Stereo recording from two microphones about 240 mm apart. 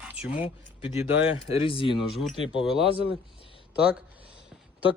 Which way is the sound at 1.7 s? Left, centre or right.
Left.